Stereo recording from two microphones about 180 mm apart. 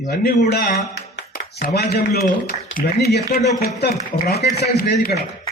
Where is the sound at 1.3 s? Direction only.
60° left (ahead or behind).